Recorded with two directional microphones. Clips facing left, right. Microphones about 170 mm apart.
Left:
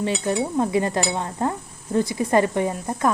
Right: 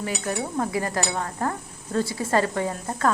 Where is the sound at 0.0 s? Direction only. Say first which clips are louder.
Left 5 dB; 25° left (ahead or behind).